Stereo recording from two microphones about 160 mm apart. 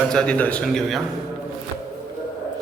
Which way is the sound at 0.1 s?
5° left (ahead or behind).